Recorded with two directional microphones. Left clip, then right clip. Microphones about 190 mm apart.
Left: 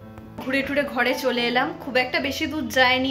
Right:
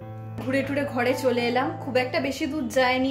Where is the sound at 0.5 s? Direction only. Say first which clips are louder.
Left 3 dB; 10° right (ahead or behind).